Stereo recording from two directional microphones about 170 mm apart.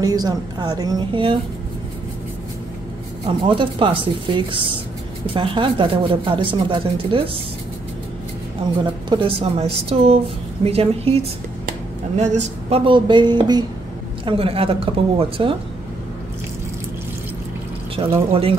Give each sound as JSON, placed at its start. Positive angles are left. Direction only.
{"t": 0.0, "sound": "speech", "side_deg": -20}
{"t": 3.4, "sound": "speech", "side_deg": -30}
{"t": 9.1, "sound": "a woman's voice", "side_deg": -30}
{"t": 12.2, "sound": "a woman's voice", "side_deg": -40}
{"t": 18.0, "sound": "a woman's voice", "side_deg": -35}